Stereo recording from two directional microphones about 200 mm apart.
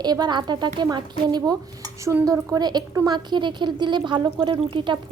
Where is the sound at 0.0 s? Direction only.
20° right (ahead or behind).